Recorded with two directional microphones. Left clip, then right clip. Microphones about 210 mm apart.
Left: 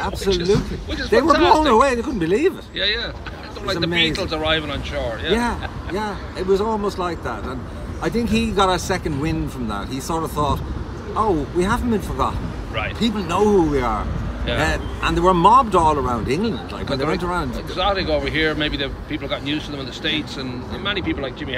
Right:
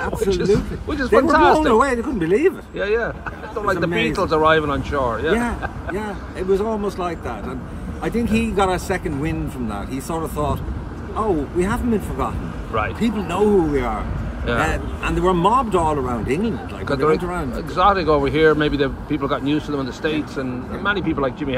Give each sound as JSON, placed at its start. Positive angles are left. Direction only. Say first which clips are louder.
{"t": 0.2, "sound": "speech", "louder": "right 1 dB", "side_deg": -20}
{"t": 1.7, "sound": "speech", "louder": "left 1 dB", "side_deg": 10}
{"t": 3.9, "sound": "speech", "louder": "right 1 dB", "side_deg": -15}
{"t": 5.3, "sound": "speech", "louder": "even", "side_deg": 10}
{"t": 16.8, "sound": "speech", "louder": "right 5 dB", "side_deg": -20}
{"t": 17.2, "sound": "speech", "louder": "left 2 dB", "side_deg": 5}
{"t": 17.7, "sound": "speech", "louder": "right 5 dB", "side_deg": -20}